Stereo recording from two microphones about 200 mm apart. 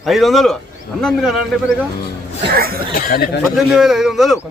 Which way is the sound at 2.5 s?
50° right (ahead or behind).